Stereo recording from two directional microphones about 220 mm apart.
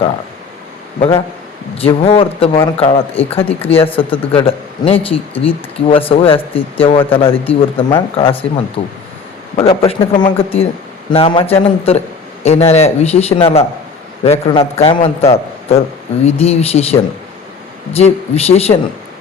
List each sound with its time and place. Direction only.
0.9 s a man's voice: 25° left (ahead or behind)